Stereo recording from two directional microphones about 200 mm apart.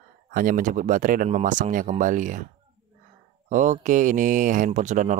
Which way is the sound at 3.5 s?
40° right (ahead or behind).